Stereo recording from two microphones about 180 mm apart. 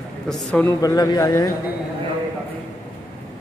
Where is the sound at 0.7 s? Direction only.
20° left (ahead or behind).